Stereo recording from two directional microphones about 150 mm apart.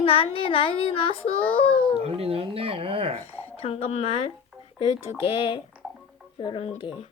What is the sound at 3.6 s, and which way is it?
A child's voice, 40° left (ahead or behind).